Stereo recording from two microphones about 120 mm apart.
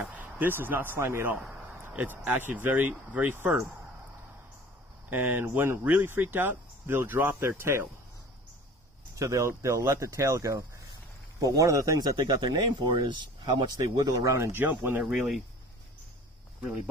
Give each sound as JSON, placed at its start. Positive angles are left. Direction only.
{"t": 0.0, "sound": "speech", "side_deg": -15}
{"t": 5.1, "sound": "speech", "side_deg": -20}
{"t": 9.1, "sound": "speech", "side_deg": -25}
{"t": 13.9, "sound": "speech", "side_deg": -30}